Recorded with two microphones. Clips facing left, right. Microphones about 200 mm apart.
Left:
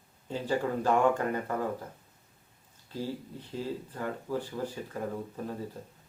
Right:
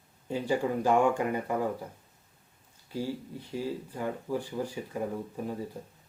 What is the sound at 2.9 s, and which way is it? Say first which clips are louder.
Speech: right 2 dB; 10° right (ahead or behind).